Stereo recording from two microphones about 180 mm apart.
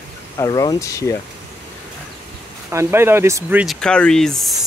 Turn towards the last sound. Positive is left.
turn(degrees=0)  # may be behind; listen again after turning